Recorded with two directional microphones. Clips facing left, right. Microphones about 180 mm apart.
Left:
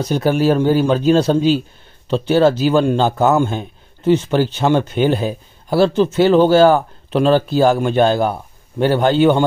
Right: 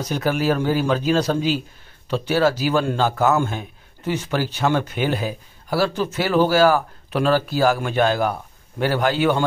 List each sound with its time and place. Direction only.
0.0 s a man's voice: 30° left (ahead or behind)